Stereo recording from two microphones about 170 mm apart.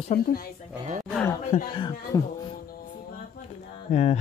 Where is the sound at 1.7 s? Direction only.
25° left (ahead or behind).